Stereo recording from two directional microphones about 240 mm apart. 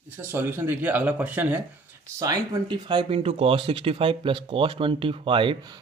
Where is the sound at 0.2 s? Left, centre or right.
Centre.